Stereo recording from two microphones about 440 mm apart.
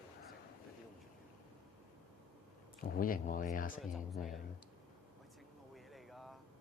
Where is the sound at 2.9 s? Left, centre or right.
Centre.